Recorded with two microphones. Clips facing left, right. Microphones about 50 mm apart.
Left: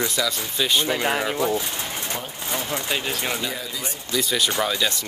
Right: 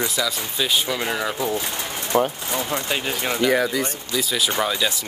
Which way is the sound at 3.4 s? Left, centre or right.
Right.